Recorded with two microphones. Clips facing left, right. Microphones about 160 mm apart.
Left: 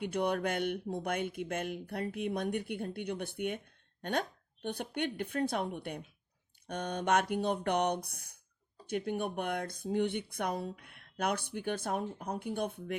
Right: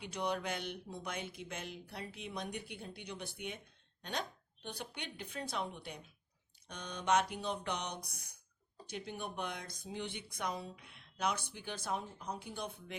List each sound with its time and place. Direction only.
0.0 s speech: 55° left (ahead or behind)